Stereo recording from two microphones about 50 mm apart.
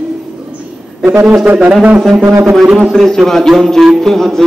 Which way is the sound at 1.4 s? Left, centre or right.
Right.